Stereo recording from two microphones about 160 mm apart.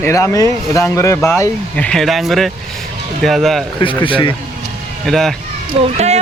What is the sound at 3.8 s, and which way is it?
Speech, 30° left (ahead or behind).